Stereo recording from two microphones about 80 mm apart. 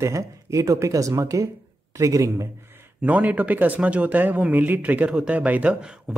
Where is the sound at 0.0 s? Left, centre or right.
Right.